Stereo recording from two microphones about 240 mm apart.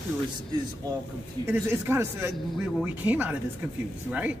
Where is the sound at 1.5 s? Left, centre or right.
Centre.